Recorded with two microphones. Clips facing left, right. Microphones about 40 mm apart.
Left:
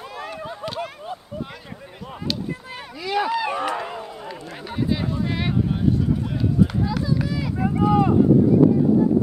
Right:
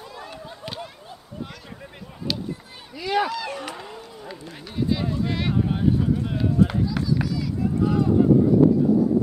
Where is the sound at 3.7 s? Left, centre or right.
Left.